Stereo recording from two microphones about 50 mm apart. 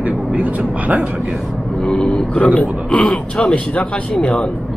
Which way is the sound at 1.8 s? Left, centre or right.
Centre.